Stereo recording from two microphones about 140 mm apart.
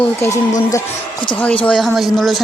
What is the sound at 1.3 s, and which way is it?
Speech, 10° left (ahead or behind).